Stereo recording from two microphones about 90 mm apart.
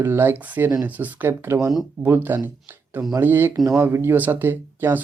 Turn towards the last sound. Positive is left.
turn(degrees=-20)  # may be behind; listen again after turning